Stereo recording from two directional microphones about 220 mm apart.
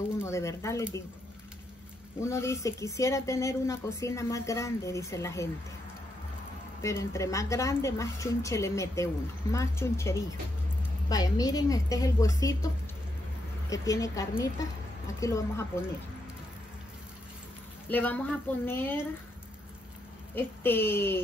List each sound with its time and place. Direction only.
0.2 s a woman's voice: 15° left (ahead or behind)
2.2 s a woman's voice: 15° left (ahead or behind)
6.8 s a woman's voice: 15° left (ahead or behind)
17.8 s a woman's voice: 10° left (ahead or behind)
20.3 s a woman's voice: 10° left (ahead or behind)